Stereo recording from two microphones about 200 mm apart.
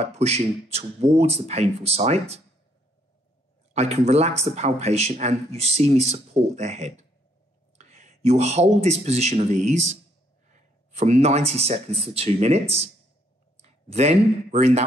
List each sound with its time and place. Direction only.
0.0 s speech: 30° right (ahead or behind)
3.7 s speech: 30° right (ahead or behind)